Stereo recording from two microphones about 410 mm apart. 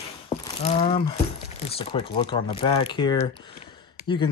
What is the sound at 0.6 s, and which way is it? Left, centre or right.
Speech, centre.